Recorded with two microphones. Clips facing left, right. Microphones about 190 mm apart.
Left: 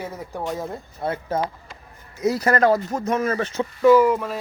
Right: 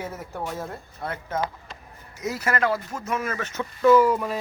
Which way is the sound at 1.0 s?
30° left (ahead or behind).